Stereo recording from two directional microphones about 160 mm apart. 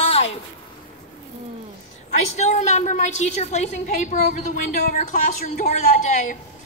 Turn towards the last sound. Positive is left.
turn(degrees=50)  # may be behind; listen again after turning